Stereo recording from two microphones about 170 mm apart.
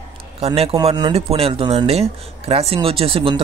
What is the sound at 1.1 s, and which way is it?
Speech, 35° right (ahead or behind).